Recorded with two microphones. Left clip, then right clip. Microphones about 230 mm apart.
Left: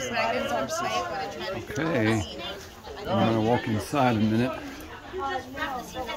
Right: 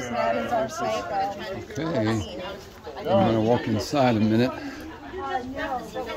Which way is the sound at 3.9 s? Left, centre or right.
Centre.